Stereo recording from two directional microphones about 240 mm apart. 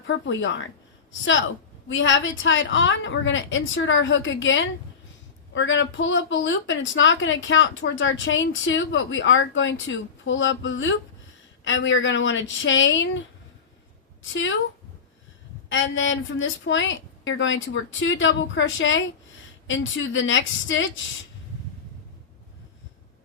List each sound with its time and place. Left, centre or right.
0.1 s a woman's voice: left
14.2 s a woman's voice: left
15.7 s a woman's voice: left